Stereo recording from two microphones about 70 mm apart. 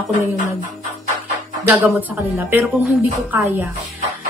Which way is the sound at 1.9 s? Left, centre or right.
Right.